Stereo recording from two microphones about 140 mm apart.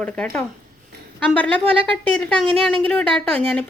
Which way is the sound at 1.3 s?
5° left (ahead or behind).